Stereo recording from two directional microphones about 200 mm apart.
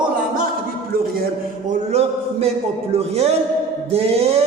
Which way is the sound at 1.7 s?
30° right (ahead or behind).